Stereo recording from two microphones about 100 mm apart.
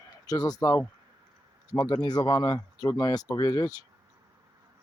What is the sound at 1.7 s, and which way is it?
Speech, 45° left (ahead or behind).